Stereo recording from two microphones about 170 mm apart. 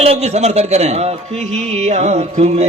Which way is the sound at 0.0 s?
40° right (ahead or behind).